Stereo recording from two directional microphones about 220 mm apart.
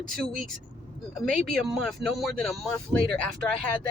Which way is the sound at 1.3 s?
Centre (ahead or behind).